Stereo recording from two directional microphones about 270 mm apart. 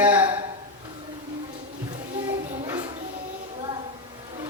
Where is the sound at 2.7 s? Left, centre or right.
Centre.